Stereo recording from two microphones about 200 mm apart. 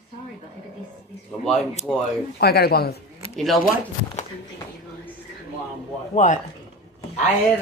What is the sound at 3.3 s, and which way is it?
Speech, centre (ahead or behind).